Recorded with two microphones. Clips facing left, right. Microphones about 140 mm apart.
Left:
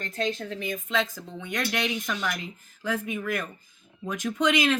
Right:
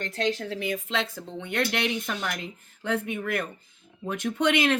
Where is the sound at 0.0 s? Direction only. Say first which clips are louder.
Right 2 dB; 75° right (ahead or behind).